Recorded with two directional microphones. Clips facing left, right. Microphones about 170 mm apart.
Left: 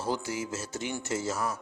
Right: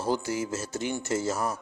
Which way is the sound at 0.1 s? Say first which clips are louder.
Right 4 dB; 45° right (ahead or behind).